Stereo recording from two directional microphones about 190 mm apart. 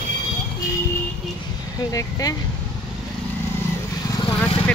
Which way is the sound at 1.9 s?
20° left (ahead or behind).